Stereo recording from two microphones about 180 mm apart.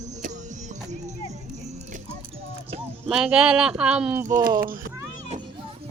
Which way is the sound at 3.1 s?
5° right (ahead or behind).